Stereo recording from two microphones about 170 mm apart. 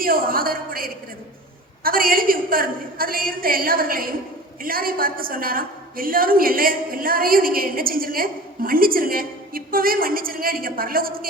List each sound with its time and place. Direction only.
0.0 s a woman's voice: 60° right (ahead or behind)